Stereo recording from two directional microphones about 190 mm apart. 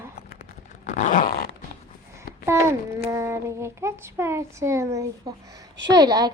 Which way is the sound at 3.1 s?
15° right (ahead or behind).